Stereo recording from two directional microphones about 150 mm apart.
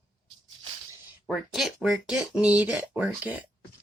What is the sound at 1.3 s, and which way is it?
Speech, centre (ahead or behind).